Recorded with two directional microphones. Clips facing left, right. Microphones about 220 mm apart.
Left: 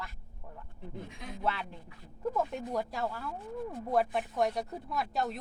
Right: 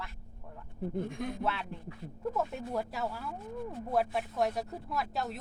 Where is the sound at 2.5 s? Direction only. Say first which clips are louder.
Left 1 dB; 5° right (ahead or behind).